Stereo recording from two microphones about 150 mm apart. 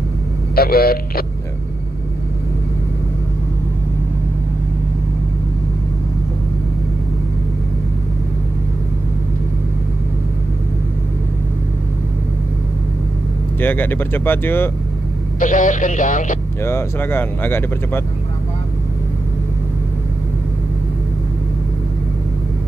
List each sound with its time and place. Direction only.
0.6 s speech: 90° left
13.6 s speech: 15° left (ahead or behind)
15.3 s speech: 60° left (ahead or behind)
16.6 s speech: 15° left (ahead or behind)